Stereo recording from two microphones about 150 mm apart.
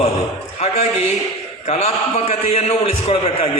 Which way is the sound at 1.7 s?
45° left (ahead or behind).